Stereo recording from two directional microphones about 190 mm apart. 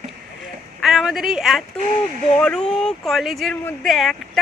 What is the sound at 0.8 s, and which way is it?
Speech, centre (ahead or behind).